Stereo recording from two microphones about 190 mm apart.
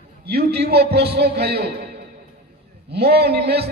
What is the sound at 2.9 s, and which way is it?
Speech, 60° right (ahead or behind).